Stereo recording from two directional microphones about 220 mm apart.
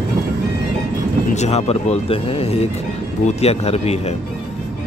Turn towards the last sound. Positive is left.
turn(degrees=30)  # may be behind; listen again after turning